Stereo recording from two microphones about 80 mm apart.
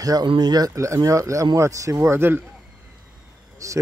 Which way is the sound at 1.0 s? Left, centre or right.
Right.